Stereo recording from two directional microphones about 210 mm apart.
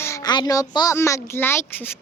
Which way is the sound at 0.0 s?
15° left (ahead or behind).